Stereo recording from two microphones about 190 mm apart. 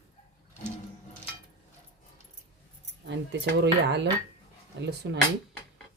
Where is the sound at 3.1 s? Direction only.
65° right (ahead or behind).